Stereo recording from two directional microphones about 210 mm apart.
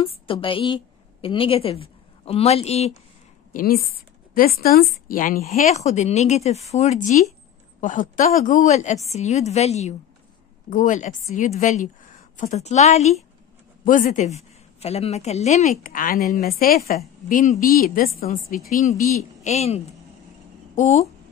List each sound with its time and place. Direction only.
0.0 s a woman's voice: 25° left (ahead or behind)
3.5 s a woman's voice: 45° left (ahead or behind)